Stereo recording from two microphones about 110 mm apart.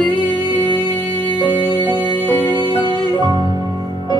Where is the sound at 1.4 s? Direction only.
45° left (ahead or behind).